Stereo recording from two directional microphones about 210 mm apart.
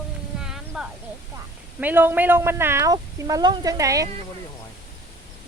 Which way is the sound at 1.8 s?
10° right (ahead or behind).